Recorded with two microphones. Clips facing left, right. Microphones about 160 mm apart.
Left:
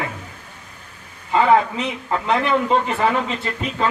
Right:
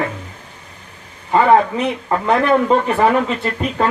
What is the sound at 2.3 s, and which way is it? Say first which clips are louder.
Speech: right 5 dB; 45° right (ahead or behind).